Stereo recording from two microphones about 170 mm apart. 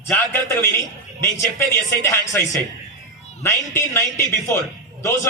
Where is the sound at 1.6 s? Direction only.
15° left (ahead or behind).